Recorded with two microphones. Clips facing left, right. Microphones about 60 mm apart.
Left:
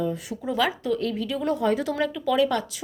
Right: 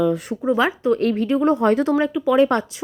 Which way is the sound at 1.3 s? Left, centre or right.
Right.